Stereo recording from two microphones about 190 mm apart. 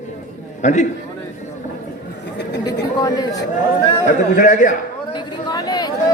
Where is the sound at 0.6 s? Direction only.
40° left (ahead or behind).